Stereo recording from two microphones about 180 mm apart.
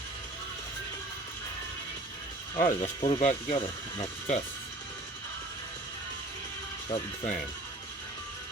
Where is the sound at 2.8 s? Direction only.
35° left (ahead or behind).